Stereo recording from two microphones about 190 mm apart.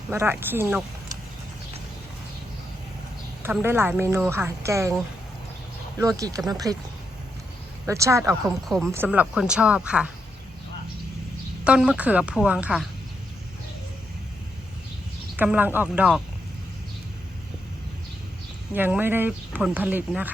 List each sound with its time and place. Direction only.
0.1 s speech: 10° right (ahead or behind)
3.4 s speech: 10° right (ahead or behind)
6.0 s speech: 20° right (ahead or behind)
7.9 s a woman's voice: 15° right (ahead or behind)
11.6 s a woman's voice: 5° right (ahead or behind)
15.4 s speech: 10° right (ahead or behind)
18.7 s speech: 10° right (ahead or behind)